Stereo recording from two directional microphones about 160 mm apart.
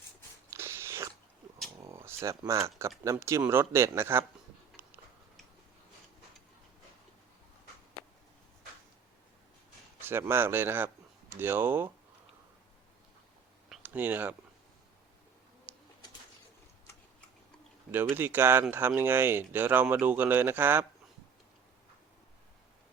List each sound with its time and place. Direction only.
0.5 s cat: 15° right (ahead or behind)
1.8 s a sound: 15° right (ahead or behind)
2.4 s speech: 20° right (ahead or behind)
10.0 s speech: 15° right (ahead or behind)
13.7 s a sound: 10° right (ahead or behind)
15.7 s bird: 10° right (ahead or behind)
18.1 s speech: 15° right (ahead or behind)